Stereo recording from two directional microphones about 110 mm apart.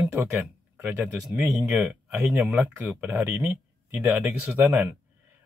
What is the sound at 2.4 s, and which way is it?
Speech, 20° right (ahead or behind).